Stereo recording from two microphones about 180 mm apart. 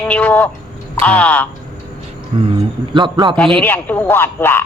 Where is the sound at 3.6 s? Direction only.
10° left (ahead or behind).